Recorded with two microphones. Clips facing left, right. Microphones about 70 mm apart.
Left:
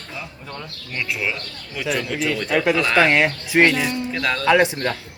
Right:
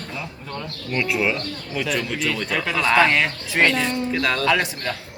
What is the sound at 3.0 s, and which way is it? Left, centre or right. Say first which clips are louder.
Speech: left 3 dB; centre.